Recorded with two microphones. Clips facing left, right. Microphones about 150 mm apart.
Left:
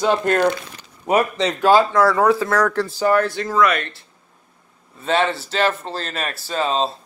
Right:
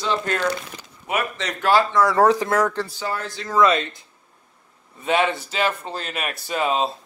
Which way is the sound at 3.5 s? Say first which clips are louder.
Right 1 dB; 25° right (ahead or behind).